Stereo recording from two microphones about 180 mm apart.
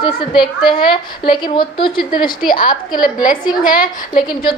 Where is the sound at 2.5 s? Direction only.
50° left (ahead or behind).